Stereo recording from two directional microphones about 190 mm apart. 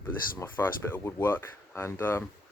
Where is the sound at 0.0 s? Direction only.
10° left (ahead or behind).